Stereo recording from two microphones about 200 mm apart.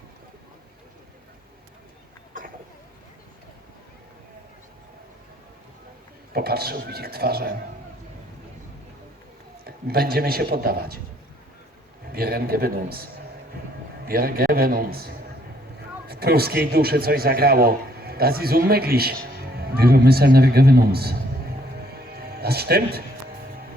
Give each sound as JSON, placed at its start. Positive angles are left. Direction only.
{"t": 6.3, "sound": "a man's voice", "side_deg": -50}
{"t": 9.6, "sound": "a man's voice", "side_deg": -50}
{"t": 12.1, "sound": "a man's voice", "side_deg": -50}